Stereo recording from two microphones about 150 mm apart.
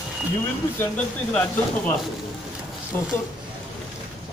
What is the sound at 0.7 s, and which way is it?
Speech, 10° left (ahead or behind).